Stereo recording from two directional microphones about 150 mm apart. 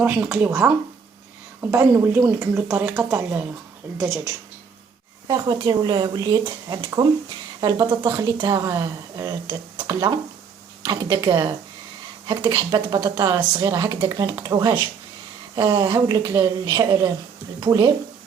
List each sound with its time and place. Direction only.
0.0 s speech: 10° right (ahead or behind)
1.6 s speech: 15° right (ahead or behind)
5.3 s speech: 30° right (ahead or behind)